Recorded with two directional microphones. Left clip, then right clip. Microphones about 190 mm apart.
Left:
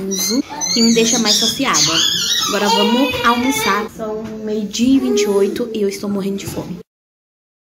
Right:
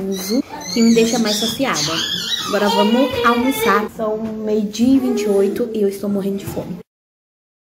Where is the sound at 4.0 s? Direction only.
20° right (ahead or behind).